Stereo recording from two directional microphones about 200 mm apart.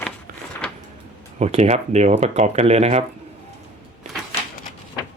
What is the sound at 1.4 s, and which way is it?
Speech, 30° right (ahead or behind).